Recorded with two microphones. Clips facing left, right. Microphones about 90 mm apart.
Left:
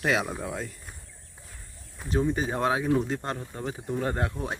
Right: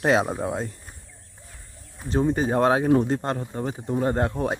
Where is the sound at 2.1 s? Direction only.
40° right (ahead or behind).